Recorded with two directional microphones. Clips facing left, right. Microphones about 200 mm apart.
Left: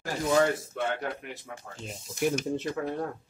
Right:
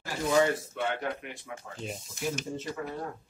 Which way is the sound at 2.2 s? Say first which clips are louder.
Left 6 dB; 65° left (ahead or behind).